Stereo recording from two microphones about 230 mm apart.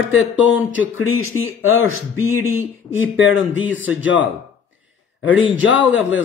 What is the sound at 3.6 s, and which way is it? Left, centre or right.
Speech, centre.